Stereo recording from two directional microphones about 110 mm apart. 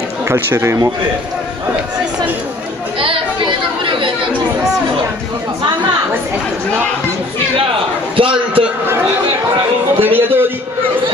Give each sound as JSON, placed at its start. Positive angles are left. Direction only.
{"t": 0.3, "sound": "speech", "side_deg": -25}
{"t": 3.0, "sound": "chatter", "side_deg": -50}
{"t": 8.2, "sound": "a sound", "side_deg": -55}
{"t": 9.9, "sound": "music", "side_deg": -20}